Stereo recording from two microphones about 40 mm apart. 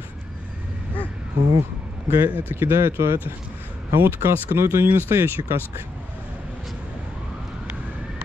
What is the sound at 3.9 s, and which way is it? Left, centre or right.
Speech, right.